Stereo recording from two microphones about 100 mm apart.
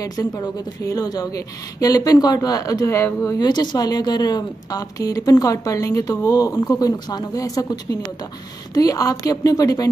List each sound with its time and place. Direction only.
0.2 s a woman's voice: 35° left (ahead or behind)
3.3 s a woman's voice: 45° left (ahead or behind)